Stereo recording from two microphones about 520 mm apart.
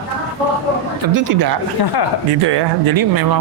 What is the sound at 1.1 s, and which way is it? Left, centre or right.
Speech, right.